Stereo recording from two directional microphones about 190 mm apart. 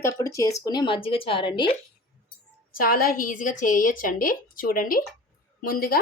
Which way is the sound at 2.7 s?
50° left (ahead or behind).